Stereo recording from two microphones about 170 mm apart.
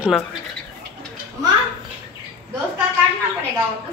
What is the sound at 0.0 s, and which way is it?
Speech, centre (ahead or behind).